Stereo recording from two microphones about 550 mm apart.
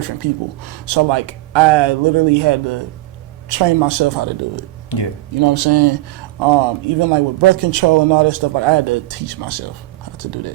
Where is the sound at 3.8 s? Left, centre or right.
Right.